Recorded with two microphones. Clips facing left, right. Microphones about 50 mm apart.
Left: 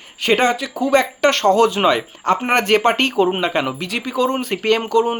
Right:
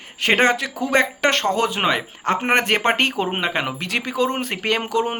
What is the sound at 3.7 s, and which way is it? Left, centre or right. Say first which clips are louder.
Speech: left 1 dB; right.